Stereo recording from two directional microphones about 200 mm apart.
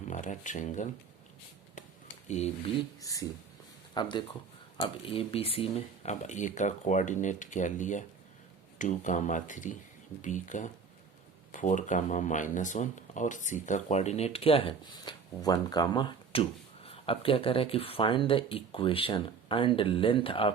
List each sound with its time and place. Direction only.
0.1 s speech: 40° left (ahead or behind)
2.2 s speech: 35° left (ahead or behind)
3.0 s speech: 15° left (ahead or behind)